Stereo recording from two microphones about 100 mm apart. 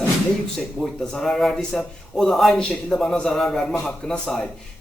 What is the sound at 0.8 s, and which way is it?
A man's voice, 10° left (ahead or behind).